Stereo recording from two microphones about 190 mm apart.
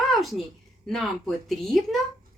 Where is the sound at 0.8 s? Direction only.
Centre (ahead or behind).